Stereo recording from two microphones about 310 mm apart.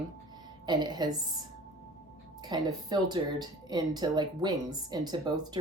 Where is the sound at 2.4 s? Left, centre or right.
Centre.